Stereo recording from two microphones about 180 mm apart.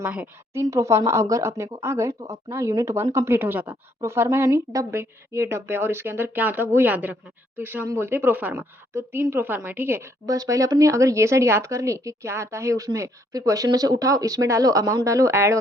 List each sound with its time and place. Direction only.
0.0 s speech: 10° right (ahead or behind)